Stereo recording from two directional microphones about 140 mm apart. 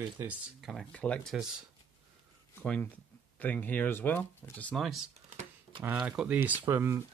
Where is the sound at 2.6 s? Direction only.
10° left (ahead or behind).